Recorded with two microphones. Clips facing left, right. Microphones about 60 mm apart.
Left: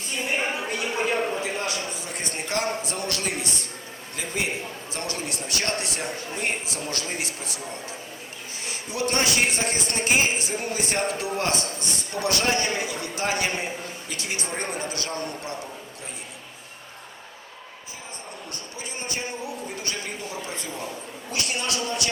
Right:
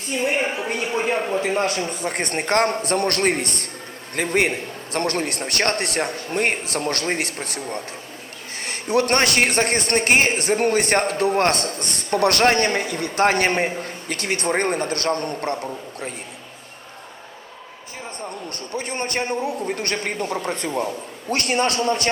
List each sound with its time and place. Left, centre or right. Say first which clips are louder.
1.4 s a man's voice: right 7 dB; right
18.5 s a man's voice: right 11 dB; right